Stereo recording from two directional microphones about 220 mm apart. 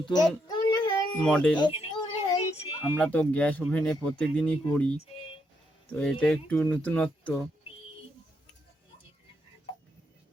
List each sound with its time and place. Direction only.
0.0 s a child's voice: 20° left (ahead or behind)
0.4 s child singing: 20° left (ahead or behind)
1.1 s speech: 5° left (ahead or behind)
1.5 s a sound: 25° left (ahead or behind)
2.9 s speech: 5° left (ahead or behind)